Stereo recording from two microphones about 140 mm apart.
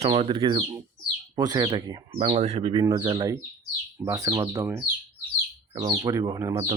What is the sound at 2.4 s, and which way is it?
Speech, 50° right (ahead or behind).